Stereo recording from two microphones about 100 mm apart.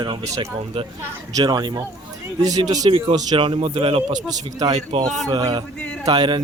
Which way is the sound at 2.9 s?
65° right (ahead or behind).